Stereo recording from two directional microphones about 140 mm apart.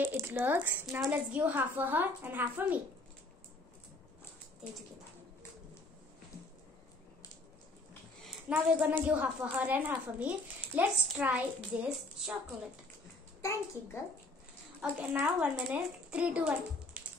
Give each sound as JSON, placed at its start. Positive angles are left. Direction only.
{"t": 0.0, "sound": "speech", "side_deg": -15}
{"t": 8.3, "sound": "a woman's voice", "side_deg": -10}
{"t": 13.4, "sound": "a child's voice", "side_deg": 20}
{"t": 14.8, "sound": "speech", "side_deg": -10}